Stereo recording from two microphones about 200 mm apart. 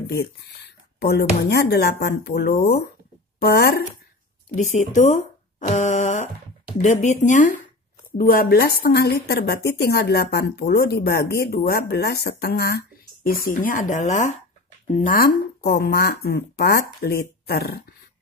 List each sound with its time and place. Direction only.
0.9 s speech: 55° left (ahead or behind)
4.6 s speech: 40° left (ahead or behind)
5.6 s a sound: 35° left (ahead or behind)
6.8 s speech: 35° left (ahead or behind)